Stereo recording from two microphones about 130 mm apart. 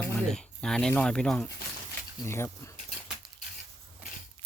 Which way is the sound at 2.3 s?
20° left (ahead or behind).